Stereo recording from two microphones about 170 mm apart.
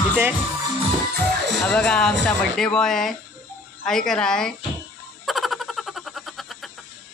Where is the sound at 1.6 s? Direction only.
5° left (ahead or behind).